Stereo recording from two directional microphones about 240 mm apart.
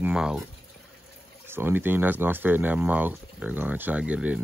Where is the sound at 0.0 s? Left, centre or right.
Centre.